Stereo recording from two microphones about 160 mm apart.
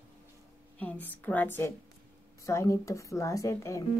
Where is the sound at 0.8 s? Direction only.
10° left (ahead or behind).